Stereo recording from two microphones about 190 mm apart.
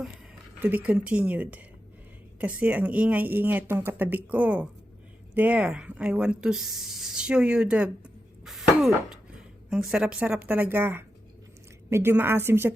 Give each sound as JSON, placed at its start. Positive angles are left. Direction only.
{"t": 0.6, "sound": "speech", "side_deg": -10}
{"t": 8.4, "sound": "cough", "side_deg": 0}
{"t": 9.6, "sound": "speech", "side_deg": -5}